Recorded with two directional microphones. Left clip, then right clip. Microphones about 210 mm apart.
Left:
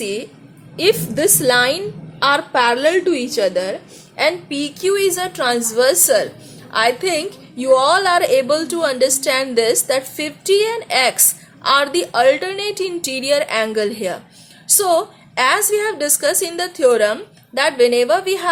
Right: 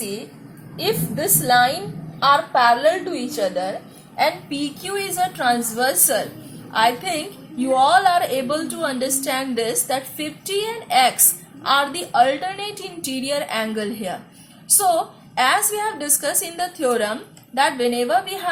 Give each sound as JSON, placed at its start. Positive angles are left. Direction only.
{"t": 0.8, "sound": "a woman's voice", "side_deg": 50}